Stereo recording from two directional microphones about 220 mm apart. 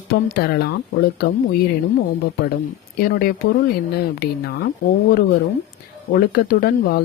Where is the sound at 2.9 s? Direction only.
45° left (ahead or behind).